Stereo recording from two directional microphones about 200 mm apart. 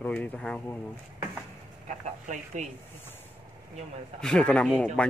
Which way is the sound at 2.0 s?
35° right (ahead or behind).